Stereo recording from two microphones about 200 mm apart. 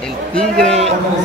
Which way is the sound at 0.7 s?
35° right (ahead or behind).